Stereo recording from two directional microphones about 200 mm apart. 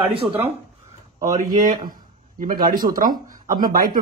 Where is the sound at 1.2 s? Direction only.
40° right (ahead or behind).